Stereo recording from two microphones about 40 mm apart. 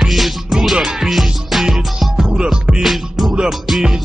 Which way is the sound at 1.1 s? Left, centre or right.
Centre.